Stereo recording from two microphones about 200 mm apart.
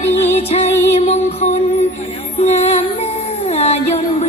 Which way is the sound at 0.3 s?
30° left (ahead or behind).